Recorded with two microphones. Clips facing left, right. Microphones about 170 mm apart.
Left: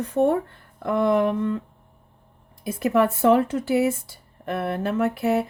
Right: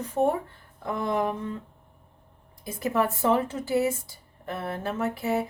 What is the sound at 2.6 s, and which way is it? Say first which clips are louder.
Speech: left 6 dB; 65° left (ahead or behind).